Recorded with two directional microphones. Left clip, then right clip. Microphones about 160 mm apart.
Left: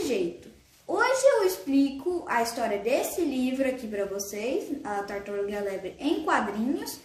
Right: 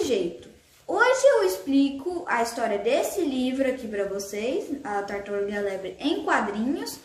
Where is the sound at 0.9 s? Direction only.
10° right (ahead or behind).